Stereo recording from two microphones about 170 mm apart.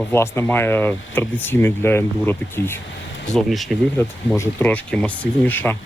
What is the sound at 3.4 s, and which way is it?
Speech, centre (ahead or behind).